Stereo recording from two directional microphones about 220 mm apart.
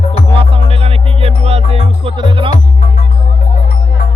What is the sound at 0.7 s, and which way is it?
Music, 25° right (ahead or behind).